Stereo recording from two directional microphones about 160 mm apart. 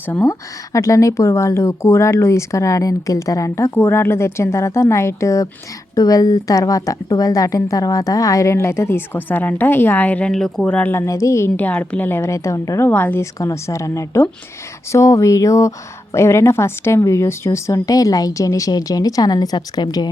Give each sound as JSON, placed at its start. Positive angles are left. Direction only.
{"t": 0.1, "sound": "a woman's voice", "side_deg": 15}